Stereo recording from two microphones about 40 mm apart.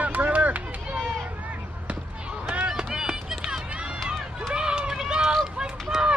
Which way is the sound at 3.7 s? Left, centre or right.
Right.